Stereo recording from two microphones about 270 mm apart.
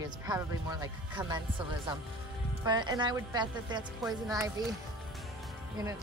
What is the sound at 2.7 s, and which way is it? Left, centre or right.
Speech, centre.